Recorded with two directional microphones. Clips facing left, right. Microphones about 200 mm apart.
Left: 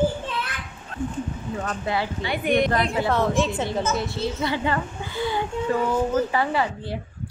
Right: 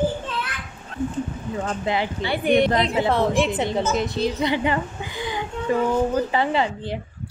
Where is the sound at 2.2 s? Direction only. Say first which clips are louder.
Right 3 dB; 30° right (ahead or behind).